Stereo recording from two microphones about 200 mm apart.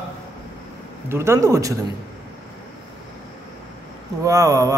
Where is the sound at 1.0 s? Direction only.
15° right (ahead or behind).